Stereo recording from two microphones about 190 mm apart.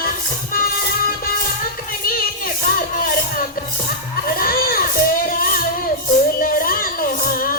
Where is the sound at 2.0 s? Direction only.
50° left (ahead or behind).